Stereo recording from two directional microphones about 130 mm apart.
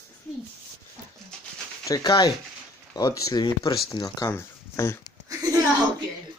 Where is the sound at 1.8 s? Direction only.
30° left (ahead or behind).